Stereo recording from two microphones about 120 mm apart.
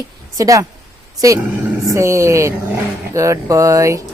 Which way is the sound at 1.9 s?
25° right (ahead or behind).